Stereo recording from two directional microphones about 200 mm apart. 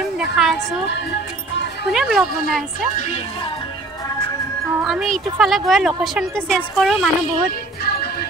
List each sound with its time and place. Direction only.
0.2 s a woman's voice: centre (ahead or behind)
1.9 s a woman's voice: centre (ahead or behind)
4.8 s a woman's voice: centre (ahead or behind)
7.8 s music: 50° left (ahead or behind)